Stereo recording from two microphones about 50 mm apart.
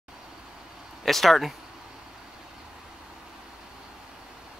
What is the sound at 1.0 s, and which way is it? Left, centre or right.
Speech, centre.